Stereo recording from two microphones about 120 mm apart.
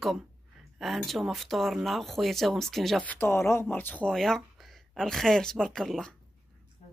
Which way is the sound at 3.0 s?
15° left (ahead or behind).